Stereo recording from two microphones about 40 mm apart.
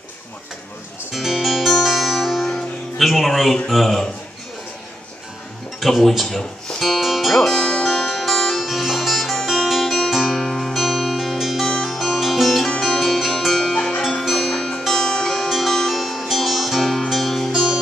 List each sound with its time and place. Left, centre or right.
1.1 s music: centre
3.0 s speech: centre
5.8 s speech: centre
7.6 s music: centre
8.1 s music: centre
10.7 s music: centre
13.5 s music: centre
14.0 s music: centre
14.5 s music: centre
17.5 s music: centre